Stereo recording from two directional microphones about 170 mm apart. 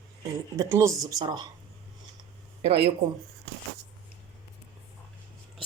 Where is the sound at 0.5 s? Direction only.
15° right (ahead or behind).